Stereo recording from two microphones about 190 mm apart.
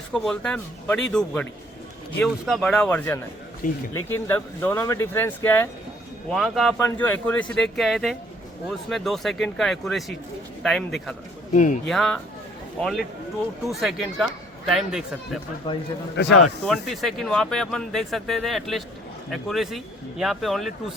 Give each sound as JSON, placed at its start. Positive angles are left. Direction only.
{"t": 0.1, "sound": "speech", "side_deg": 5}
{"t": 11.5, "sound": "speech", "side_deg": 40}
{"t": 11.9, "sound": "speech", "side_deg": 0}
{"t": 15.6, "sound": "a man's voice", "side_deg": 25}
{"t": 16.1, "sound": "speech", "side_deg": 65}
{"t": 16.6, "sound": "speech", "side_deg": 0}